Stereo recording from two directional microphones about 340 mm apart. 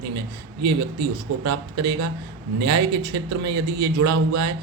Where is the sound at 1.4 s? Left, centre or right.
Right.